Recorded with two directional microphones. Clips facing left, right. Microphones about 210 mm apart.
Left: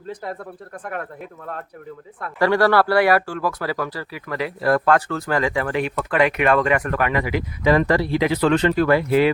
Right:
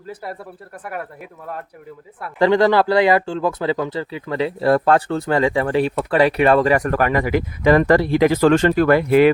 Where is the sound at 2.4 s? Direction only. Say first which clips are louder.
Right 2 dB; 20° right (ahead or behind).